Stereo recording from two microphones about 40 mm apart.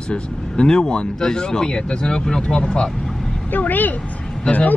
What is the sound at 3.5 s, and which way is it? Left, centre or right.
Speech, left.